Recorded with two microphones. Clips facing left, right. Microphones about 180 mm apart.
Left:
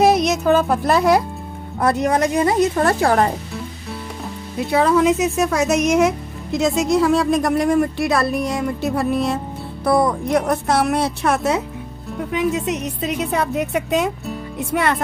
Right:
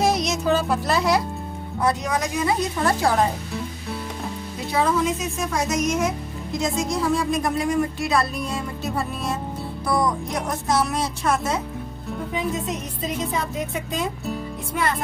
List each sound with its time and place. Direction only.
0.0 s music: 60° left (ahead or behind)
1.8 s speech: 55° left (ahead or behind)
4.7 s speech: 65° left (ahead or behind)